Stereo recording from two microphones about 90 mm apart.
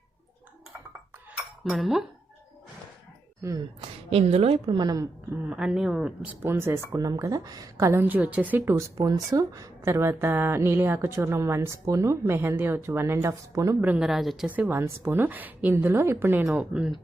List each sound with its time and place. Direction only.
1.4 s cutlery: centre (ahead or behind)
4.1 s a woman's voice: 90° right
4.8 s a woman's voice: 45° right (ahead or behind)
5.5 s speech: 10° right (ahead or behind)
6.4 s speech: 25° right (ahead or behind); by 7.9 s 45° right (ahead or behind)
7.9 s a woman's voice: 25° right (ahead or behind)
14.0 s a woman's voice: 5° right (ahead or behind)
14.4 s a woman's voice: 15° right (ahead or behind)
16.5 s speech: 15° right (ahead or behind)